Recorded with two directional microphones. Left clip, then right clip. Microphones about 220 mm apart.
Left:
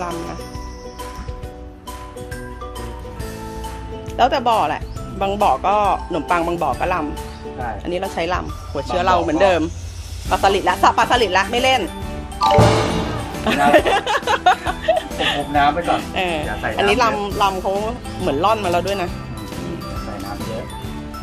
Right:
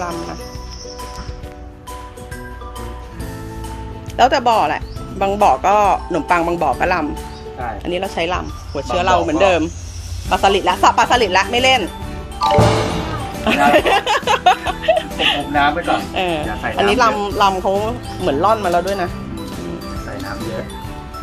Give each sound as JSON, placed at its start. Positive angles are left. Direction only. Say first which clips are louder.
{"t": 4.2, "sound": "speech", "louder": "right 3 dB", "side_deg": -10}
{"t": 17.2, "sound": "speech", "louder": "right 3 dB", "side_deg": -15}